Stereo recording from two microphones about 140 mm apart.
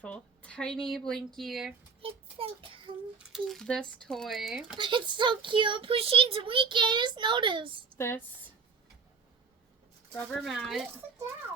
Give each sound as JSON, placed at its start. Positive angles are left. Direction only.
{"t": 0.0, "sound": "a woman's voice", "side_deg": 10}
{"t": 2.0, "sound": "child singing", "side_deg": -40}
{"t": 3.3, "sound": "speech", "side_deg": 5}
{"t": 4.8, "sound": "speech", "side_deg": -35}
{"t": 7.9, "sound": "speech", "side_deg": 15}
{"t": 10.2, "sound": "speech", "side_deg": 0}